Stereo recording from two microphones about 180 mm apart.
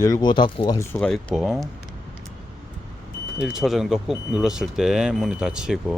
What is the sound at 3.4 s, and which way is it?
Speech, 5° right (ahead or behind).